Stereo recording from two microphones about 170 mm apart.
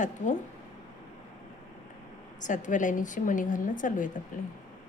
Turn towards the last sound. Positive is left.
turn(degrees=50)  # may be behind; listen again after turning